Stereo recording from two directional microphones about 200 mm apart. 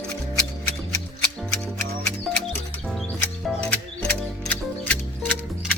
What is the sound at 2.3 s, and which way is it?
Music, centre (ahead or behind).